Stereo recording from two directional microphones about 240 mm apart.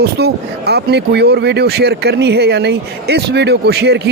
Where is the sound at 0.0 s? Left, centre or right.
Right.